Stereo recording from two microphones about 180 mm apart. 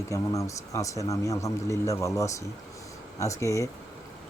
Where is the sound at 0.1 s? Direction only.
15° left (ahead or behind).